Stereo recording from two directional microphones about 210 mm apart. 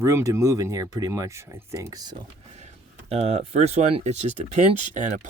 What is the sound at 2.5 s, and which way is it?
Speech, 30° right (ahead or behind).